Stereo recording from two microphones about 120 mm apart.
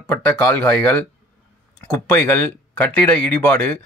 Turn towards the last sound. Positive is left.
turn(degrees=15)  # may be behind; listen again after turning